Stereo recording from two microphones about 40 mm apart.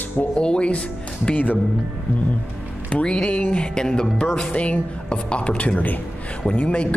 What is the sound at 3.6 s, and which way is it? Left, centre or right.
Speech, left.